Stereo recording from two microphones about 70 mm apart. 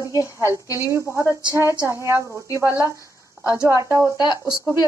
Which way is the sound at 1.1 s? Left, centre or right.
Right.